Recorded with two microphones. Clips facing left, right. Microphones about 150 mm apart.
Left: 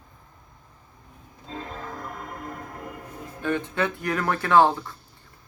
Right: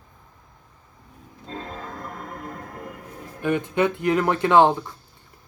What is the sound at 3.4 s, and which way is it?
Speech, 15° right (ahead or behind).